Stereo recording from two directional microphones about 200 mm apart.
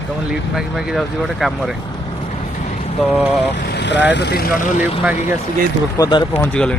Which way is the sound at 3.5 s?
55° left (ahead or behind).